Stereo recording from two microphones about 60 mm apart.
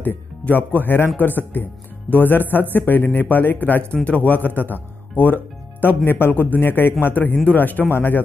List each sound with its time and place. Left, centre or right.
0.0 s speech: left